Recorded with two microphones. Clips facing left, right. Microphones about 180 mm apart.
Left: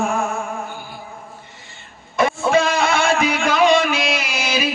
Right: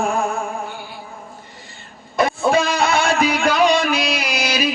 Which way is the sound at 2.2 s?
35° right (ahead or behind).